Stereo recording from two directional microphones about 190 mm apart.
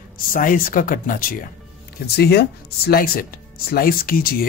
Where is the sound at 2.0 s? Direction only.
60° left (ahead or behind).